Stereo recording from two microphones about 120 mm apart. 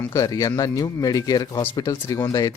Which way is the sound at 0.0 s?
25° left (ahead or behind).